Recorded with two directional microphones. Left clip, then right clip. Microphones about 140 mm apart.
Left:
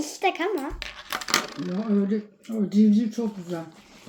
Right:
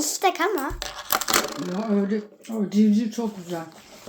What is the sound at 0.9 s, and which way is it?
Coin, 90° right.